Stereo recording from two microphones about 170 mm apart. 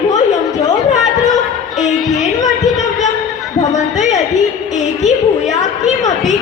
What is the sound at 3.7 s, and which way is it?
A woman's voice, 45° left (ahead or behind).